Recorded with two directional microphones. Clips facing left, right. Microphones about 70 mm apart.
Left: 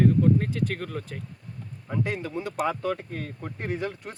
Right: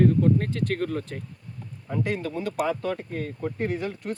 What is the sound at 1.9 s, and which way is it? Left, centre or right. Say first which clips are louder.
Speech: right 1 dB; centre.